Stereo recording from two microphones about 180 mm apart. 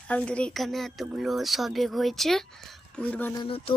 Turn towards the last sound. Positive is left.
turn(degrees=30)  # may be behind; listen again after turning